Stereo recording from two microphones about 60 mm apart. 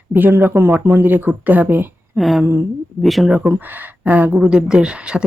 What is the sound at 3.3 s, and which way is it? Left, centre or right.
Speech, right.